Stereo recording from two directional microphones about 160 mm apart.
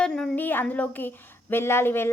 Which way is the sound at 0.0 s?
5° left (ahead or behind).